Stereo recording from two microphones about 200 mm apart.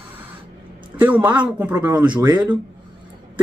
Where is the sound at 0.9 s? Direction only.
10° right (ahead or behind).